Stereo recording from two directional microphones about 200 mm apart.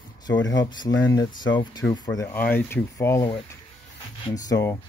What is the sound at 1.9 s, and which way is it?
Speech, 20° left (ahead or behind).